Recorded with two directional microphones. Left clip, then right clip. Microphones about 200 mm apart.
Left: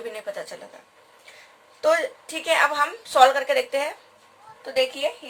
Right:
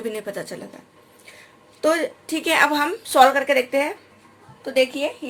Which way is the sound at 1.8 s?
40° right (ahead or behind).